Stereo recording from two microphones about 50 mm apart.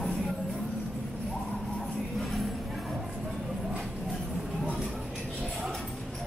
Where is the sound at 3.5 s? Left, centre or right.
Centre.